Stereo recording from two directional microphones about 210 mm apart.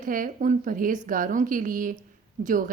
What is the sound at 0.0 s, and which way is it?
A woman's voice, 40° right (ahead or behind).